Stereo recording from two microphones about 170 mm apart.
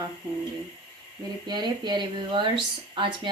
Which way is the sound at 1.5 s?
25° right (ahead or behind).